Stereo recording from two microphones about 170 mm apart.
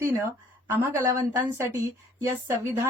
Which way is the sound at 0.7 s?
15° right (ahead or behind).